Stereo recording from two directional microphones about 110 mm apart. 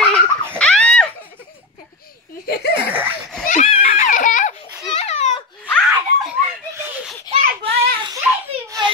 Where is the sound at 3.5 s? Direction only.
80° left.